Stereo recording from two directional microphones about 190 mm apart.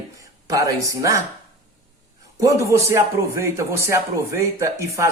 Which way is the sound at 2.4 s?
15° right (ahead or behind).